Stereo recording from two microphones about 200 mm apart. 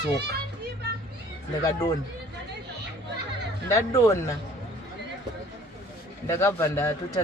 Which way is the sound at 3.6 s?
15° left (ahead or behind).